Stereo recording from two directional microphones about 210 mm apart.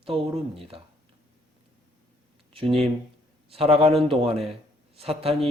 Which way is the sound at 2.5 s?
25° right (ahead or behind).